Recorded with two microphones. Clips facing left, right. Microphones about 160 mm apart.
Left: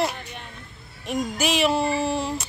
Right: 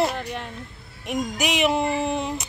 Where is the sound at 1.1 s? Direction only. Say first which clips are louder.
Left 1 dB; 15° right (ahead or behind).